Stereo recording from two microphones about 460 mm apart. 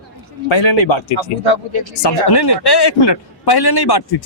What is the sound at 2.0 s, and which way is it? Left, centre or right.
A man's voice, left.